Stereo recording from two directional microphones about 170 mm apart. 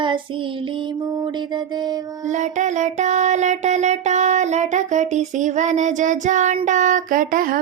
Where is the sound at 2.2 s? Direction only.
45° right (ahead or behind).